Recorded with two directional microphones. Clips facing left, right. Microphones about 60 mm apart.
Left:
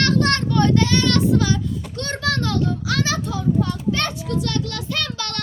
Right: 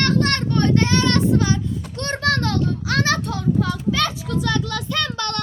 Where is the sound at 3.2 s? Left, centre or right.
Right.